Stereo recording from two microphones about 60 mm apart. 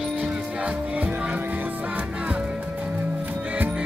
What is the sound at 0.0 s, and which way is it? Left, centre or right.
Music, centre.